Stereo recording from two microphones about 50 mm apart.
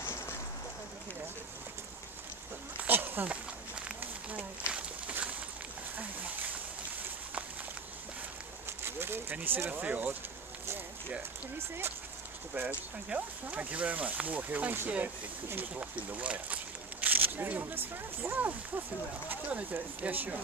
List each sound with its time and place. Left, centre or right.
2.9 s a sound: right
4.0 s a sound: right
8.8 s a sound: right
9.3 s speech: right
9.7 s speech: right
11.5 s speech: right
12.6 s speech: right
13.1 s speech: right
15.8 s speech: right
17.0 s speech: right